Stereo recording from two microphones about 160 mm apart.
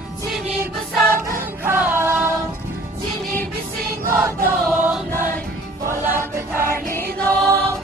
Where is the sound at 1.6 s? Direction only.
15° right (ahead or behind).